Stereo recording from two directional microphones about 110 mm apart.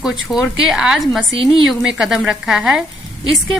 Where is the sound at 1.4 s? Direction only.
50° right (ahead or behind).